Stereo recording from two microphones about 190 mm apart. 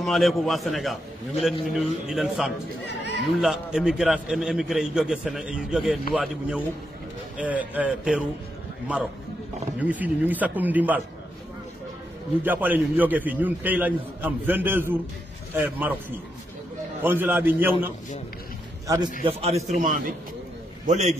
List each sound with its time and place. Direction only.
0.0 s a man's voice: centre (ahead or behind)
2.9 s a sound: 65° left (ahead or behind)
3.3 s a man's voice: 5° right (ahead or behind)
9.8 s a man's voice: 10° right (ahead or behind)
12.4 s a man's voice: 10° right (ahead or behind)
17.0 s a man's voice: 10° right (ahead or behind)
19.2 s a man's voice: 35° right (ahead or behind)